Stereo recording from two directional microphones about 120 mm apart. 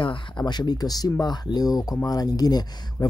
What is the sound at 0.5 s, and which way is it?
Speech, 35° left (ahead or behind).